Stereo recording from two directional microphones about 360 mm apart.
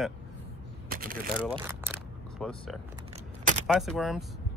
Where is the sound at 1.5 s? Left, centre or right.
Centre.